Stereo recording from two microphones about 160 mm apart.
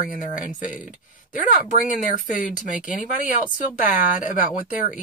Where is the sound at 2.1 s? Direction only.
55° left (ahead or behind).